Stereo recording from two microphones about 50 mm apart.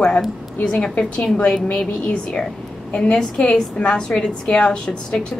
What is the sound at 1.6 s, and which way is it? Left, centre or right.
A woman's voice, left.